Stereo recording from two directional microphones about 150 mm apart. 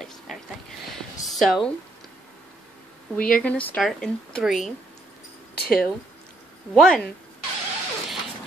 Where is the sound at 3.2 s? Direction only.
5° left (ahead or behind).